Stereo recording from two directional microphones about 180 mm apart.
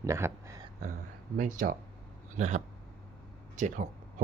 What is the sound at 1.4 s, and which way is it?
Speech, 45° right (ahead or behind).